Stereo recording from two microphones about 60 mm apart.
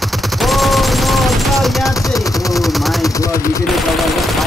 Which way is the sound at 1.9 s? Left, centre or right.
Left.